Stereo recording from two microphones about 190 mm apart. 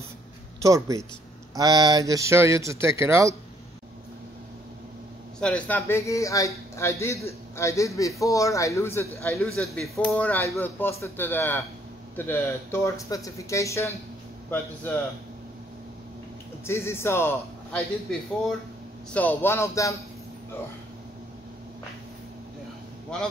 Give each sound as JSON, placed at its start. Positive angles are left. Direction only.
{"t": 0.6, "sound": "speech", "side_deg": -15}
{"t": 5.4, "sound": "a man's voice", "side_deg": 5}
{"t": 9.6, "sound": "a man's voice", "side_deg": 0}
{"t": 16.6, "sound": "a man's voice", "side_deg": 15}
{"t": 23.1, "sound": "speech", "side_deg": 5}